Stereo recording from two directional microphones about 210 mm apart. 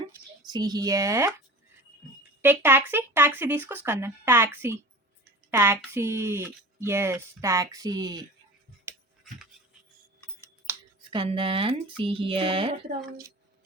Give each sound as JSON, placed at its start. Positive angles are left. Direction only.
{"t": 0.4, "sound": "speech", "side_deg": -20}
{"t": 2.4, "sound": "speech", "side_deg": -10}
{"t": 10.7, "sound": "a sound", "side_deg": -10}
{"t": 11.1, "sound": "speech", "side_deg": -25}